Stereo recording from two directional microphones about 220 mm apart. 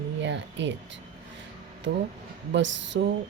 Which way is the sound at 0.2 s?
55° right (ahead or behind).